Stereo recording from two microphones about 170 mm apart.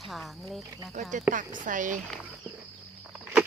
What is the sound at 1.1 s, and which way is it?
Speech, 50° right (ahead or behind).